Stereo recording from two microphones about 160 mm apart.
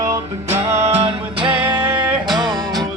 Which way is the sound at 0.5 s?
15° right (ahead or behind).